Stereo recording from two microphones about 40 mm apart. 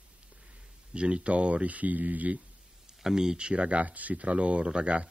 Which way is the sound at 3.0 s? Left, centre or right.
Centre.